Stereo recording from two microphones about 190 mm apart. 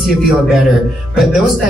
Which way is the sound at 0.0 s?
Centre (ahead or behind).